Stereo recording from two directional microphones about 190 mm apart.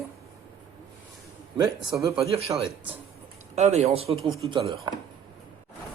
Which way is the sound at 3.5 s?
35° right (ahead or behind).